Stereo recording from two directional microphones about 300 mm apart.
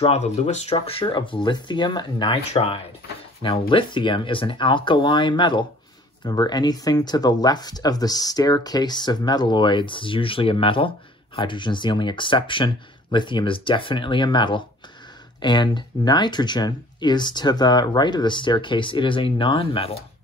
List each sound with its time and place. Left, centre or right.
0.0 s speech: left